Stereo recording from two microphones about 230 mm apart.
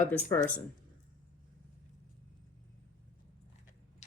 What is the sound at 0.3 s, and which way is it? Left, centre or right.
Speech, centre.